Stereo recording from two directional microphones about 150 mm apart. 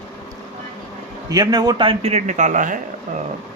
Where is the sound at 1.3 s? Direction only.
25° right (ahead or behind); by 2.7 s 60° right (ahead or behind).